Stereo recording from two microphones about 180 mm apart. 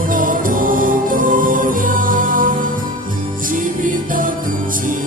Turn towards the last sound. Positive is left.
turn(degrees=-50)  # may be behind; listen again after turning